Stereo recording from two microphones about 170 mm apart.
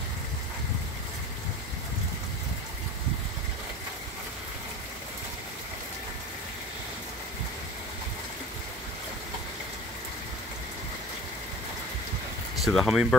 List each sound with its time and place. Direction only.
12.5 s speech: centre (ahead or behind)